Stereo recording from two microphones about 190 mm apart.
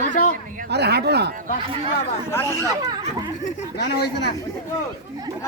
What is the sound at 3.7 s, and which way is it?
Speech, 60° left (ahead or behind).